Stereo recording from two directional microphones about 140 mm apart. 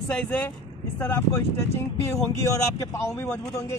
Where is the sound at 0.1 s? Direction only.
10° left (ahead or behind).